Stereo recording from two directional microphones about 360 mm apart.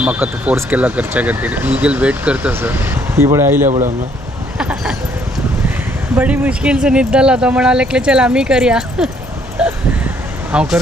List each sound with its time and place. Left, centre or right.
0.0 s speech: centre
3.7 s speech: centre
4.5 s speech: centre
6.1 s speech: centre
9.6 s a sound: centre
10.5 s speech: centre